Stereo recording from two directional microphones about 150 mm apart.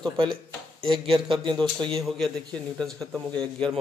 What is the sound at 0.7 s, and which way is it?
Speech, 35° right (ahead or behind).